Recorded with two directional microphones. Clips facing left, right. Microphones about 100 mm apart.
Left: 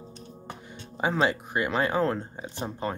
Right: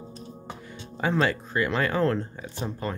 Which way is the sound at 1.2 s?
20° left (ahead or behind).